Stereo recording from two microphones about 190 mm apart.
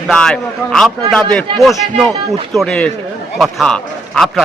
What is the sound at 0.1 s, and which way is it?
A man's voice, 5° left (ahead or behind).